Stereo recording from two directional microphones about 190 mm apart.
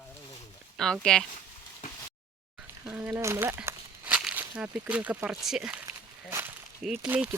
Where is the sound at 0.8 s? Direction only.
5° left (ahead or behind).